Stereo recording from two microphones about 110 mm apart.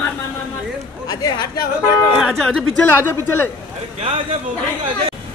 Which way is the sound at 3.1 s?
20° left (ahead or behind).